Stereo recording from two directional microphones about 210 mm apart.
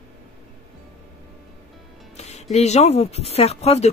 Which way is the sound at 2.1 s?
30° left (ahead or behind).